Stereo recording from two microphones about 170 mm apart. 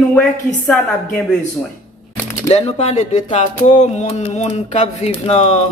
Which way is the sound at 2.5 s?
40° left (ahead or behind).